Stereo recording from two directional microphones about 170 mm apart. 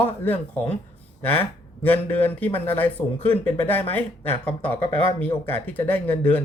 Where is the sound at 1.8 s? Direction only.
10° left (ahead or behind).